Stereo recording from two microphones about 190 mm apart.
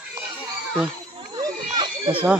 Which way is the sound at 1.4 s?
25° right (ahead or behind).